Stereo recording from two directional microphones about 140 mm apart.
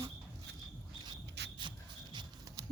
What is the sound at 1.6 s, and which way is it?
Shuffle, 35° right (ahead or behind).